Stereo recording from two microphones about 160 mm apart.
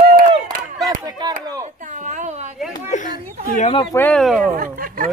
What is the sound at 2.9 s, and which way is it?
Children playing, 55° left (ahead or behind).